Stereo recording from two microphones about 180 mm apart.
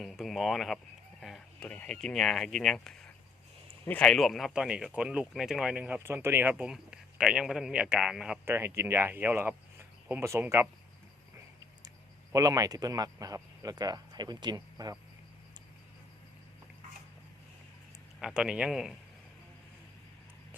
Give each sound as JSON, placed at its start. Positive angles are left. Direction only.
{"t": 0.0, "sound": "speech", "side_deg": 0}
{"t": 12.3, "sound": "speech", "side_deg": -20}
{"t": 18.2, "sound": "speech", "side_deg": -5}